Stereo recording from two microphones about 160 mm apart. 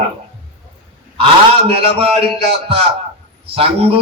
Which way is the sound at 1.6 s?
35° right (ahead or behind).